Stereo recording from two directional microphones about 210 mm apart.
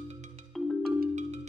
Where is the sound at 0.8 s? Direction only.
45° right (ahead or behind).